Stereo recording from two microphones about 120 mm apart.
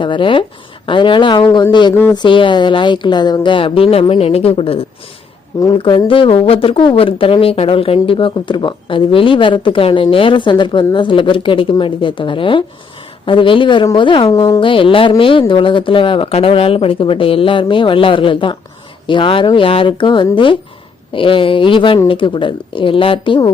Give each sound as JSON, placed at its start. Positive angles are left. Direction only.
{"t": 0.0, "sound": "speech", "side_deg": 45}